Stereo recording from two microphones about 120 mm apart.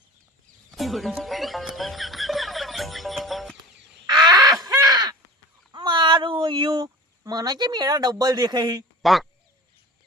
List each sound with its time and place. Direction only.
0.7 s music: centre (ahead or behind)
4.3 s crow: 30° right (ahead or behind)
5.7 s a sound: 40° right (ahead or behind)
9.0 s quack: centre (ahead or behind)